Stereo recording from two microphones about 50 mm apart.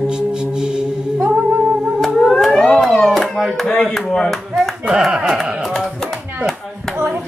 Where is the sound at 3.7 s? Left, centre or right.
Centre.